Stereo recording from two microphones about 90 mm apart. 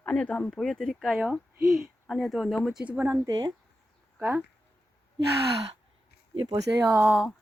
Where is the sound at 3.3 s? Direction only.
50° right (ahead or behind).